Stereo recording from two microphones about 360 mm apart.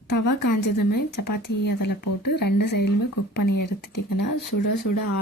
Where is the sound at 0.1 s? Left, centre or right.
Left.